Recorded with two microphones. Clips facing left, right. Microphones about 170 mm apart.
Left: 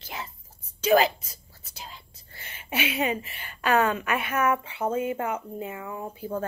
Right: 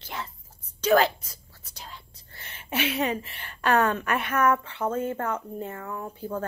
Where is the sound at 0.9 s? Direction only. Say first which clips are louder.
Even; 20° left (ahead or behind).